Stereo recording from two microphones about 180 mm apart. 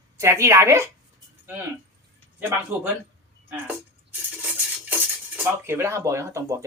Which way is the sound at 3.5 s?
10° right (ahead or behind).